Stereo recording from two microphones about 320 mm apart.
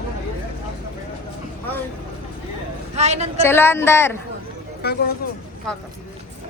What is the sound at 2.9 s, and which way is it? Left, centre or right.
Speech, centre.